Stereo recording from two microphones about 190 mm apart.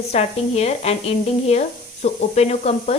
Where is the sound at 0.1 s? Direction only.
35° left (ahead or behind).